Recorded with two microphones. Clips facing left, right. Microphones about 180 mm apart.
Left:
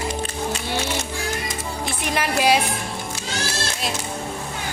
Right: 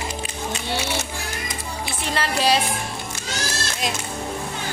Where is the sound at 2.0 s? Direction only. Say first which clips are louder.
Left 2 dB; 15° left (ahead or behind).